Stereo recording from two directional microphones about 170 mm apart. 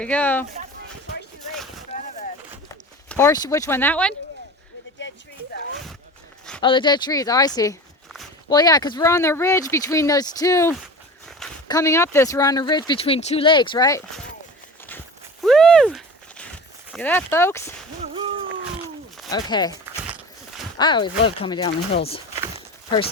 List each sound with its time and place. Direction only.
0.0 s speech: 10° left (ahead or behind)
1.9 s boat: 35° left (ahead or behind)
3.1 s speech: 15° left (ahead or behind)
6.6 s speech: 25° left (ahead or behind)
15.4 s a sound: 5° left (ahead or behind)
16.9 s speech: 10° left (ahead or behind)
18.0 s a sound: 30° right (ahead or behind)
19.3 s speech: 25° left (ahead or behind)
20.7 s speech: 25° left (ahead or behind)